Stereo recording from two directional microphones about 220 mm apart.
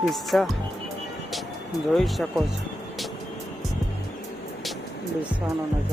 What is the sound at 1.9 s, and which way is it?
Speech, centre (ahead or behind).